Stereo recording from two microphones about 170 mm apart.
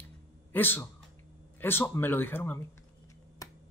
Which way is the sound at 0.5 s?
10° left (ahead or behind).